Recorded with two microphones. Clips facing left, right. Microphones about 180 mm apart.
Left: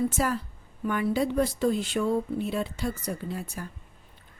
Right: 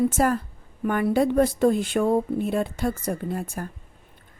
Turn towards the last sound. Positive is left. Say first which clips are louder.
# right 5 dB
turn(degrees=-50)  # may be behind; listen again after turning